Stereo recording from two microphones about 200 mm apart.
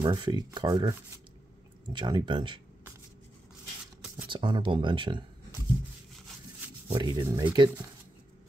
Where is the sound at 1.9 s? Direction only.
25° right (ahead or behind).